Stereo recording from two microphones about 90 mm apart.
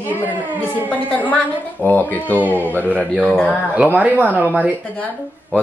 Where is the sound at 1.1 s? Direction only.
15° left (ahead or behind).